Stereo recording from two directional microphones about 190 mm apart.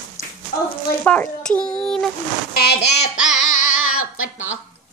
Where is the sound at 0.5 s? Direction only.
55° left (ahead or behind).